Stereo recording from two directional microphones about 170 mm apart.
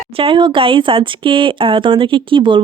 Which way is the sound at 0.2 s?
30° right (ahead or behind).